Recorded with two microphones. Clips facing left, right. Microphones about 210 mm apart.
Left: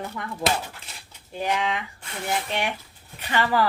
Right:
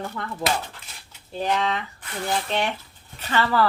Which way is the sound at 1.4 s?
10° left (ahead or behind).